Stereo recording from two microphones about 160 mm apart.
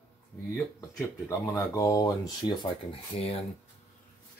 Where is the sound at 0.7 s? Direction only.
20° left (ahead or behind); by 3.4 s 40° left (ahead or behind).